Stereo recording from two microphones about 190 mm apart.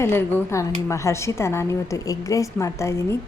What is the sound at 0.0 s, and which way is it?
A woman's voice, 10° left (ahead or behind).